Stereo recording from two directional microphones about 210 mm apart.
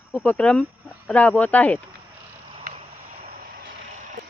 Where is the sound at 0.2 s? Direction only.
5° left (ahead or behind).